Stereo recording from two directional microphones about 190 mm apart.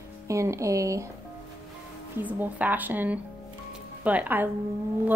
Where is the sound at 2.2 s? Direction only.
10° right (ahead or behind).